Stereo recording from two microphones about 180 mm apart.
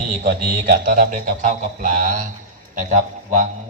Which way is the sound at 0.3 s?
55° right (ahead or behind).